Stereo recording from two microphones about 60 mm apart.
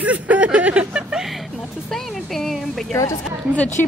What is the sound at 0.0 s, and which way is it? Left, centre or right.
Vehicle, right.